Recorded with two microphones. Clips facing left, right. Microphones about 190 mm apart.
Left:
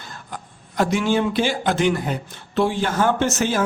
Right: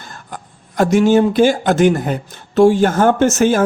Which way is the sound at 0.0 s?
45° right (ahead or behind).